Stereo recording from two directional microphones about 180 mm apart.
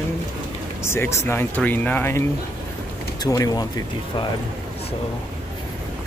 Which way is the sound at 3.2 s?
20° left (ahead or behind).